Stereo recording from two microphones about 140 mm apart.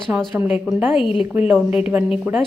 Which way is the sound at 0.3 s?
10° right (ahead or behind).